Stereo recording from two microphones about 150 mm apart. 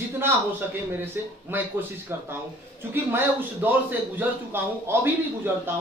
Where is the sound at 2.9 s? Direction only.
15° right (ahead or behind).